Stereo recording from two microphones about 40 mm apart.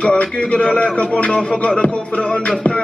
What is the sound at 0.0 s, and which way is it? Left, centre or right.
A man's voice, left.